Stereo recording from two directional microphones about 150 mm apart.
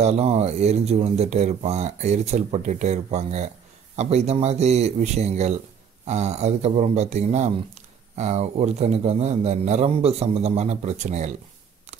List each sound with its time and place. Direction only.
0.0 s speech: 45° right (ahead or behind)